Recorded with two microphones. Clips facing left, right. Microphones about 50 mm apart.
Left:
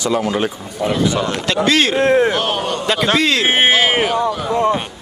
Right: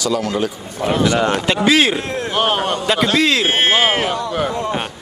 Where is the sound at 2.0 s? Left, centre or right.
Left.